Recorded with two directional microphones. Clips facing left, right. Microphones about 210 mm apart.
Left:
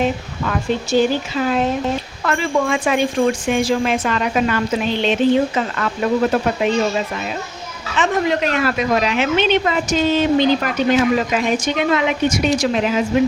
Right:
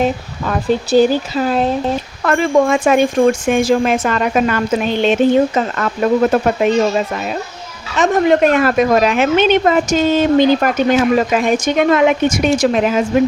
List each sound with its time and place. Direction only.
0.0 s speech: 35° right (ahead or behind)
2.2 s a woman's voice: 50° right (ahead or behind)
7.9 s a woman's voice: 45° right (ahead or behind)